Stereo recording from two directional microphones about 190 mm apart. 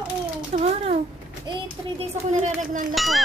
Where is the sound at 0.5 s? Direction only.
35° right (ahead or behind).